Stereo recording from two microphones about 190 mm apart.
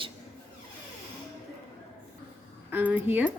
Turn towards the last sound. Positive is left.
turn(degrees=-10)  # may be behind; listen again after turning